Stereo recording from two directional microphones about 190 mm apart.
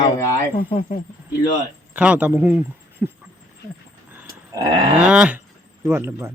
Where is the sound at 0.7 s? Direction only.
35° left (ahead or behind).